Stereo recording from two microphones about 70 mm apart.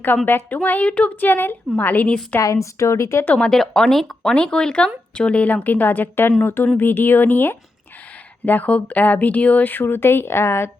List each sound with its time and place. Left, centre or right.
0.3 s speech: left
2.4 s speech: left
3.2 s speech: centre; by 10.7 s left